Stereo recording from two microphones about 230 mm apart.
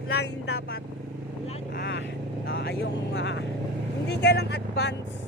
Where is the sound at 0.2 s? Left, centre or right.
Left.